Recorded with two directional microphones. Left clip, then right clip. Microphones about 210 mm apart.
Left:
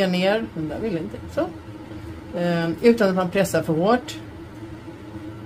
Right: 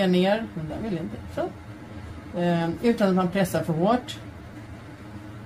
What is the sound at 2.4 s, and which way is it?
Speech, 50° left (ahead or behind).